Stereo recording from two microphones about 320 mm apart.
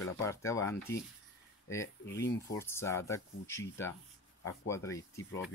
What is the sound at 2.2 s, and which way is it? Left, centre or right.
Speech, left.